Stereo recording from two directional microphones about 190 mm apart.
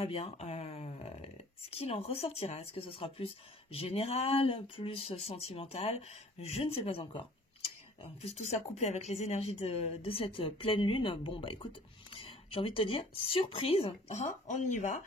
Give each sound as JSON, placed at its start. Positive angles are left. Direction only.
{"t": 0.0, "sound": "speech", "side_deg": 30}